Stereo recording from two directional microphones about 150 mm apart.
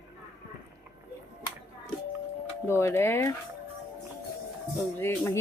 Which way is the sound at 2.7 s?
15° left (ahead or behind).